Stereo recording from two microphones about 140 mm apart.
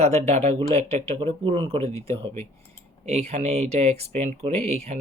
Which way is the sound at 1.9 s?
20° left (ahead or behind).